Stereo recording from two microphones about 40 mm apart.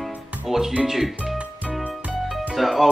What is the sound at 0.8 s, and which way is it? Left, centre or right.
Speech, centre.